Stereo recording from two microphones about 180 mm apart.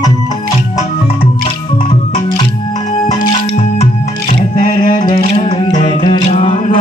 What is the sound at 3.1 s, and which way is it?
Music, 40° left (ahead or behind).